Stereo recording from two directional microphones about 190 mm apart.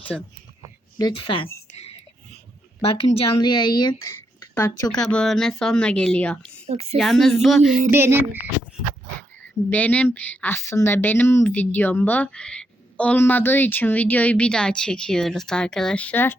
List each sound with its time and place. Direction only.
0.1 s a woman's voice: centre (ahead or behind)
0.9 s speech: 25° left (ahead or behind)
3.0 s a woman's voice: 25° left (ahead or behind); by 6.5 s 5° left (ahead or behind)
6.7 s a woman's voice: 30° right (ahead or behind)
6.9 s a woman's voice: centre (ahead or behind)
7.9 s a sound: 10° right (ahead or behind)
9.6 s speech: 10° left (ahead or behind)